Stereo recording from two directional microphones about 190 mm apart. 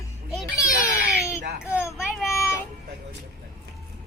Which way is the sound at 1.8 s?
15° left (ahead or behind).